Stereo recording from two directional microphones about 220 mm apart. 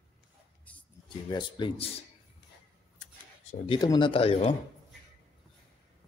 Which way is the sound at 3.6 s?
20° left (ahead or behind).